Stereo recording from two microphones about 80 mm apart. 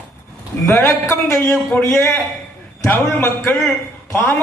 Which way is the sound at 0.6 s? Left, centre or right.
Left.